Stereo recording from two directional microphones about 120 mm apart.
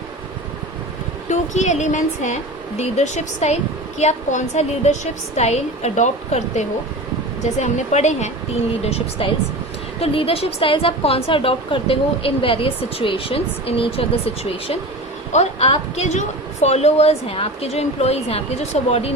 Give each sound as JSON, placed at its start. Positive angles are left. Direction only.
{"t": 1.3, "sound": "a woman's voice", "side_deg": 75}
{"t": 2.7, "sound": "a woman's voice", "side_deg": 65}
{"t": 5.4, "sound": "a woman's voice", "side_deg": 65}
{"t": 8.8, "sound": "a woman's voice", "side_deg": 55}
{"t": 15.3, "sound": "a woman's voice", "side_deg": 60}